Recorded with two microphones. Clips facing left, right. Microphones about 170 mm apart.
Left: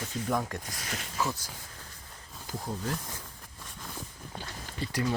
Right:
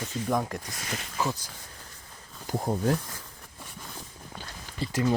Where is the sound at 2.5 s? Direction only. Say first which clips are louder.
Right 8 dB; 55° right (ahead or behind).